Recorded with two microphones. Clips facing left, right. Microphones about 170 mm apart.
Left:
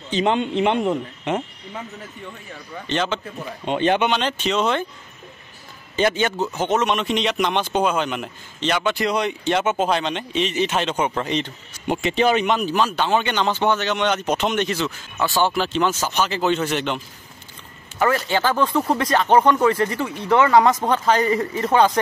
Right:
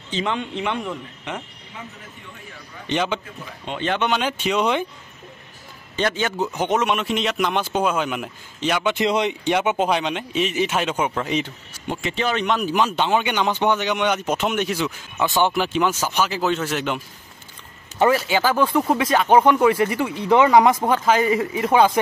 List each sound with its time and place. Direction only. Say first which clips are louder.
0.1 s speech: left 5 dB; 25° left (ahead or behind)
2.9 s speech: even; 15° right (ahead or behind)
3.6 s speech: left 6 dB; 20° left (ahead or behind)
4.1 s speech: even; 10° right (ahead or behind)
5.9 s speech: left 3 dB; centre (ahead or behind)
6.3 s speech: even; 15° right (ahead or behind)
8.9 s speech: right 1 dB; 20° right (ahead or behind); by 11.5 s 5° right (ahead or behind)
11.9 s speech: left 5 dB; 20° left (ahead or behind)
12.4 s speech: left 2 dB; 5° left (ahead or behind)
12.6 s speech: even; 15° right (ahead or behind)
18.1 s speech: right 1 dB; 5° right (ahead or behind)